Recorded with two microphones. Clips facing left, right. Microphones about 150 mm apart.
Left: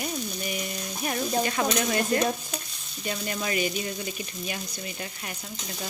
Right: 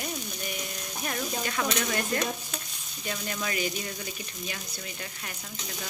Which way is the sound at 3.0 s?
20° left (ahead or behind).